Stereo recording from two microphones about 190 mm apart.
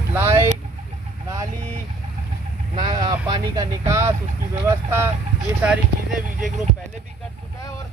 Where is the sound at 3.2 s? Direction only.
20° right (ahead or behind).